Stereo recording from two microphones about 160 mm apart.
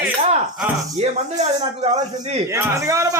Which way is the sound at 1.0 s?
45° right (ahead or behind).